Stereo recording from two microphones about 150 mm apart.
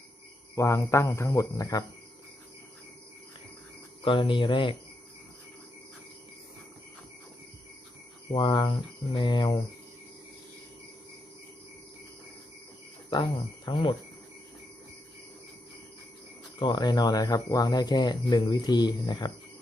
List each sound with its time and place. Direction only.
0.5 s speech: 20° left (ahead or behind)
4.0 s speech: 35° left (ahead or behind)
8.3 s speech: 30° left (ahead or behind)
13.1 s speech: 30° left (ahead or behind)
16.6 s speech: 30° left (ahead or behind)